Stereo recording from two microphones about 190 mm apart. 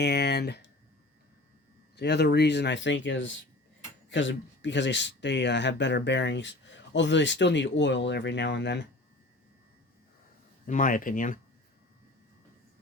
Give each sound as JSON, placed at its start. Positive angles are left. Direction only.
{"t": 0.0, "sound": "speech", "side_deg": 60}
{"t": 2.0, "sound": "speech", "side_deg": 60}
{"t": 10.7, "sound": "speech", "side_deg": 45}